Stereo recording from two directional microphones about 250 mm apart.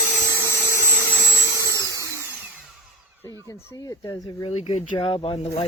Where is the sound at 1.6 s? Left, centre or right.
Centre.